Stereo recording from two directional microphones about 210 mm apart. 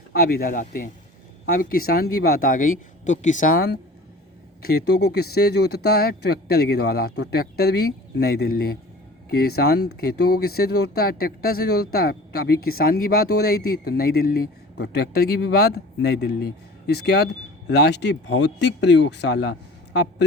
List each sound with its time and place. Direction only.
0.1 s speech: 45° left (ahead or behind)